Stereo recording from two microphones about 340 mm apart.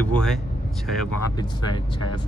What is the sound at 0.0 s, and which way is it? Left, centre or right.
Speech, centre.